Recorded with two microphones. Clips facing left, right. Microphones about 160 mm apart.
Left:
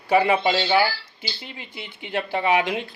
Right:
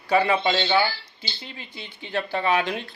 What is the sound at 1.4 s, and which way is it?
Speech, 20° left (ahead or behind).